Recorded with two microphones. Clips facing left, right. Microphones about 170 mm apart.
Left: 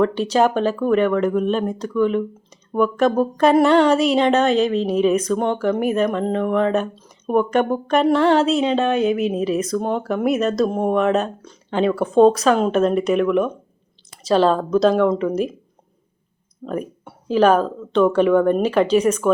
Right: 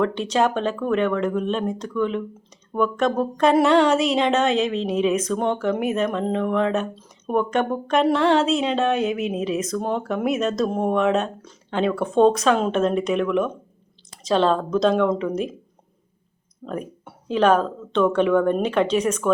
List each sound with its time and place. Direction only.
0.0 s speech: 5° left (ahead or behind)
16.6 s speech: centre (ahead or behind)